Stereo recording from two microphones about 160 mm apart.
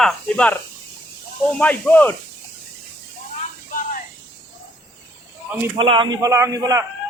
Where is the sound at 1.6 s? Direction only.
10° left (ahead or behind).